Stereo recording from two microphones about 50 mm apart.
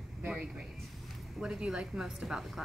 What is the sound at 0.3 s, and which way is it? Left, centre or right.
A man's voice, centre.